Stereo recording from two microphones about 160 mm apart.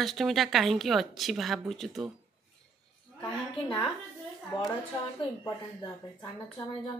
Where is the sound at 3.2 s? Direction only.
25° left (ahead or behind).